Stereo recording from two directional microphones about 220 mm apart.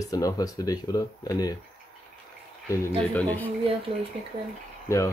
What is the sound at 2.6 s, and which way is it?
Speech, 15° left (ahead or behind).